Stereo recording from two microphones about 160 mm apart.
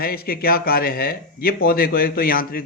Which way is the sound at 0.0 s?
70° left (ahead or behind).